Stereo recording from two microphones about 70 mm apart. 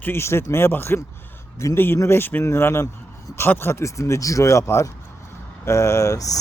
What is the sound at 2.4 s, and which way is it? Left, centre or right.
Speech, left.